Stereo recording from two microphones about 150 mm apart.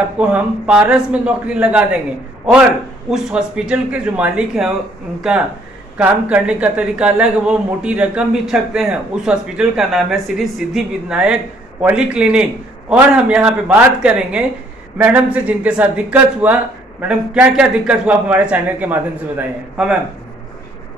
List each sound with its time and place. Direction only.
0.2 s a man's voice: 10° right (ahead or behind)
3.1 s a man's voice: 5° right (ahead or behind)
5.9 s a man's voice: 10° right (ahead or behind)